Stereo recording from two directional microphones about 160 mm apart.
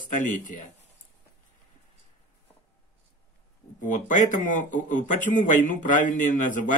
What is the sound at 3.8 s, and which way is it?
Speech, 55° left (ahead or behind).